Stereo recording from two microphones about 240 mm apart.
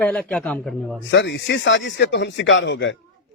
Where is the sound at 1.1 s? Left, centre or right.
Left.